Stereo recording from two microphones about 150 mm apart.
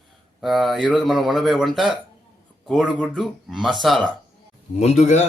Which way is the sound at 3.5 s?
Centre (ahead or behind).